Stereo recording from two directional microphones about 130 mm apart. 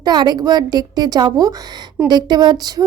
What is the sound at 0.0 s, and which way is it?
A woman's voice, 30° right (ahead or behind).